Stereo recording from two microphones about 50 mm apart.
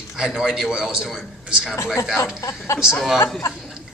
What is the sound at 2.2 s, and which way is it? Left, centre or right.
Speech, left.